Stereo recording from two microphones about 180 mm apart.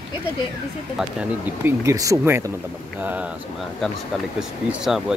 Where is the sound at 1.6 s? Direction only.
15° right (ahead or behind).